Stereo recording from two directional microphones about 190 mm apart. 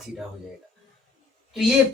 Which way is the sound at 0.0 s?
Centre (ahead or behind).